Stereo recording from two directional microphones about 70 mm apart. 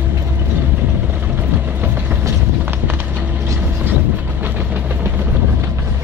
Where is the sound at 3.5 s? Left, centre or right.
Right.